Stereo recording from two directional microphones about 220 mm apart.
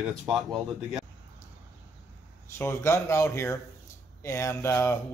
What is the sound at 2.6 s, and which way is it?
Speech, 10° left (ahead or behind).